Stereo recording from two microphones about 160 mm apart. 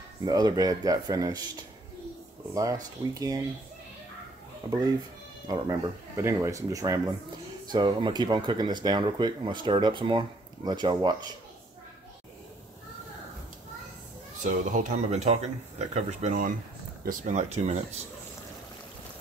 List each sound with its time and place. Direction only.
0.2 s speech: 25° right (ahead or behind)
2.5 s speech: 20° right (ahead or behind)
5.5 s speech: 25° right (ahead or behind)
14.4 s speech: 50° right (ahead or behind)